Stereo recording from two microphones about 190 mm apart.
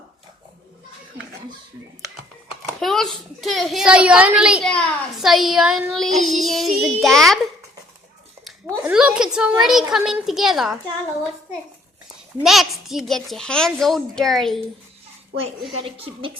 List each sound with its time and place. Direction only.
2.8 s a child's voice: centre (ahead or behind)
8.6 s a child's voice: 5° right (ahead or behind)
12.4 s a child's voice: centre (ahead or behind)
15.8 s a woman's voice: 30° right (ahead or behind)